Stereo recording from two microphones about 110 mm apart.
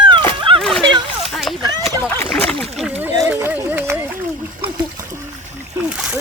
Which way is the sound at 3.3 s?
20° right (ahead or behind).